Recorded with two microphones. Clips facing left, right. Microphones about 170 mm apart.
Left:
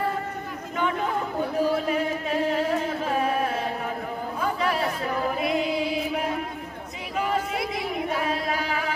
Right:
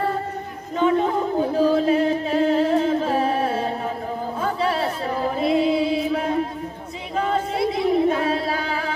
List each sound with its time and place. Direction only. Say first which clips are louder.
0.7 s chatter: right 8 dB; 30° right (ahead or behind)
1.6 s singing: right 6 dB; 30° right (ahead or behind)
4.6 s a sound: right 3 dB; 30° right (ahead or behind)
7.3 s singing: right 5 dB; 30° right (ahead or behind)